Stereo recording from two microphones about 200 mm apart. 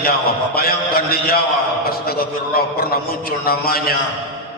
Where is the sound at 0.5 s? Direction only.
50° left (ahead or behind).